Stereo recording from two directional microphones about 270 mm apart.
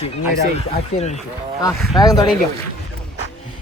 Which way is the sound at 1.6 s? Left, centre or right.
Centre.